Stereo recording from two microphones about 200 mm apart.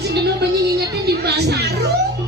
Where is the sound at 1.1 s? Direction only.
55° right (ahead or behind).